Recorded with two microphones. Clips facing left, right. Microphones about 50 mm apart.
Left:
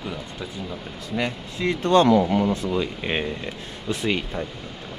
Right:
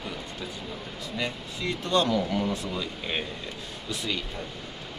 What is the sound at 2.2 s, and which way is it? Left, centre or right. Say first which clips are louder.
Speech: left 6 dB; left.